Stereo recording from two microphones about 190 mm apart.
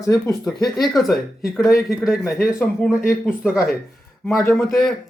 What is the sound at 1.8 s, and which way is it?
Speech, centre (ahead or behind).